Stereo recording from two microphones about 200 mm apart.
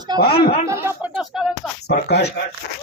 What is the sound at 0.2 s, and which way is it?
Speech, 50° left (ahead or behind).